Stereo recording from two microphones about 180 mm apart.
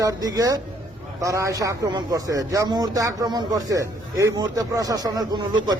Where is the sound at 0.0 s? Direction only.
20° right (ahead or behind).